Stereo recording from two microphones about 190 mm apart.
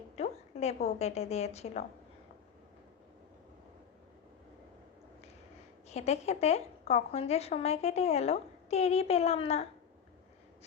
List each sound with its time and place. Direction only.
0.2 s a sound: 35° left (ahead or behind)
0.9 s a woman's voice: 35° left (ahead or behind)
5.9 s a woman's voice: 35° left (ahead or behind)